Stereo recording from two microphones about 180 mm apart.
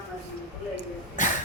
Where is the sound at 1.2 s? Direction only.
45° left (ahead or behind).